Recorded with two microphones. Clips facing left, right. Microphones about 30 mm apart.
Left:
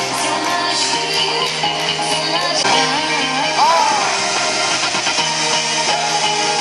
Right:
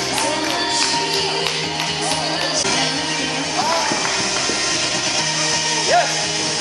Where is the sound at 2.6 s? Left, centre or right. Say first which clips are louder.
Left 7 dB; left.